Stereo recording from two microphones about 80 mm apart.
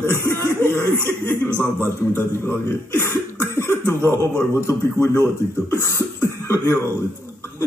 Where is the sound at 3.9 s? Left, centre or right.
Left.